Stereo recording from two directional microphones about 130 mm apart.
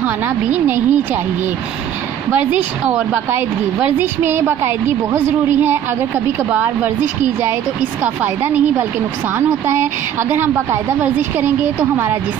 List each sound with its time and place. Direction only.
0.0 s a woman's voice: 15° right (ahead or behind)
2.9 s a woman's voice: 20° right (ahead or behind)
10.3 s a woman's voice: 15° right (ahead or behind)